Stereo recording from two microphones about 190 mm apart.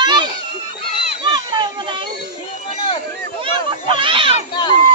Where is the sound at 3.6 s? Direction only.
25° right (ahead or behind).